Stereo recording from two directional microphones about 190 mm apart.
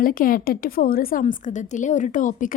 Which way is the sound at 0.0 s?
50° left (ahead or behind).